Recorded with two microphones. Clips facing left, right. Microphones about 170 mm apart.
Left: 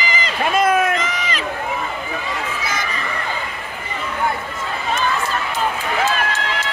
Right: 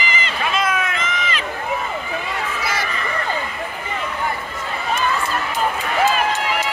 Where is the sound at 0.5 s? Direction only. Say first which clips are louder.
Left 7 dB; 50° left (ahead or behind).